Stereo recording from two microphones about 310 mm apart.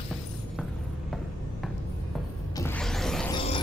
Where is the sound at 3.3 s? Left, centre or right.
Centre.